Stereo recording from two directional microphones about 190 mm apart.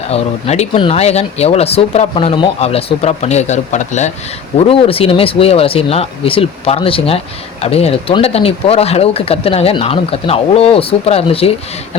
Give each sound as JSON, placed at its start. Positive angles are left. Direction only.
{"t": 0.1, "sound": "speech", "side_deg": 35}